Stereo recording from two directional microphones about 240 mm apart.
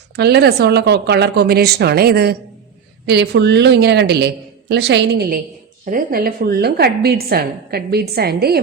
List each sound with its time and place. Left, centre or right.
0.2 s a woman's voice: right